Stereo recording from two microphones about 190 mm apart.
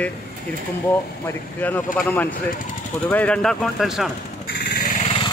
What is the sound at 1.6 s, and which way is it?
Speech, 10° left (ahead or behind).